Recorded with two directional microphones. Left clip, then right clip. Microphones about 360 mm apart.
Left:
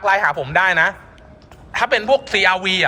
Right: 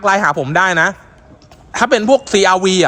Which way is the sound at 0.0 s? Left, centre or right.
Centre.